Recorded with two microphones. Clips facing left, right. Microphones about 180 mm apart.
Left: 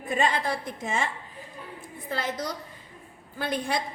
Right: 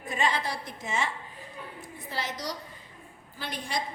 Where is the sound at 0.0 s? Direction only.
50° left (ahead or behind).